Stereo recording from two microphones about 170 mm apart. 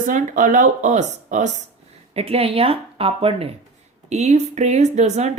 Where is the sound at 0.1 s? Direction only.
50° right (ahead or behind).